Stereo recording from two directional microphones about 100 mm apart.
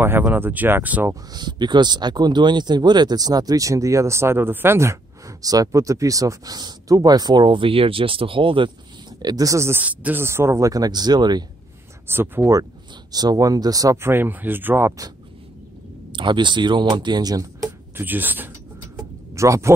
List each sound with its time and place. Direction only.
0.0 s speech: 20° right (ahead or behind)
1.3 s speech: 45° right (ahead or behind); by 4.9 s 25° right (ahead or behind)
5.4 s speech: 35° right (ahead or behind); by 8.7 s 60° right (ahead or behind)
9.2 s speech: 40° right (ahead or behind)
9.8 s speech: 15° right (ahead or behind)
10.7 s speech: 40° right (ahead or behind)
12.1 s speech: 25° right (ahead or behind)
13.1 s speech: 40° right (ahead or behind)
14.0 s speech: 20° right (ahead or behind)
16.1 s speech: 55° right (ahead or behind); by 17.7 s 35° right (ahead or behind)
17.9 s speech: 20° right (ahead or behind)
19.3 s speech: 30° right (ahead or behind)